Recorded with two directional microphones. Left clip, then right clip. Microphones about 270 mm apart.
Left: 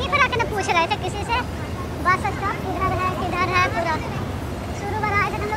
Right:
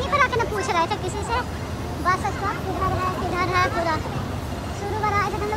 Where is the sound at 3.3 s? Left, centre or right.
Centre.